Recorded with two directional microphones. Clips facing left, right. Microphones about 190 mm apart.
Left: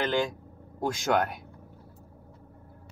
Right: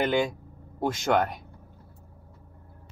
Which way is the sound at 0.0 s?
10° right (ahead or behind).